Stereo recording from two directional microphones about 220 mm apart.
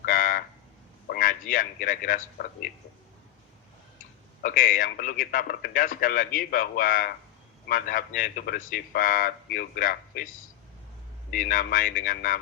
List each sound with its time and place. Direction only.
0.0 s frog: 40° left (ahead or behind)
1.0 s a man's voice: 40° left (ahead or behind)
4.4 s a man's voice: 40° left (ahead or behind)
11.3 s a man's voice: 40° left (ahead or behind)